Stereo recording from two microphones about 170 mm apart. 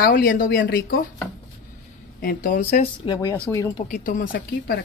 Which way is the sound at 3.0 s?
20° left (ahead or behind).